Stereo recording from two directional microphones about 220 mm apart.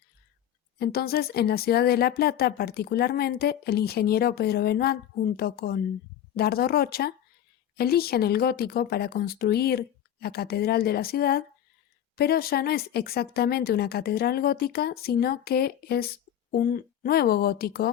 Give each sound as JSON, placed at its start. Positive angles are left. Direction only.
{"t": 0.8, "sound": "speech", "side_deg": 45}